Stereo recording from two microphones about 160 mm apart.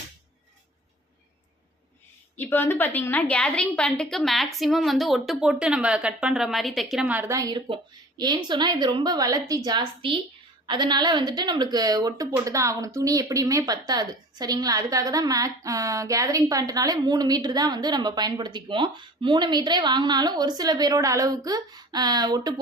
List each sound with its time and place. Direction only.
2.3 s a woman's voice: 15° left (ahead or behind); by 22.5 s 25° right (ahead or behind)